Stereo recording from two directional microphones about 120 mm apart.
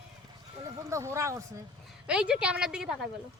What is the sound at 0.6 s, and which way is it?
Speech, 25° right (ahead or behind).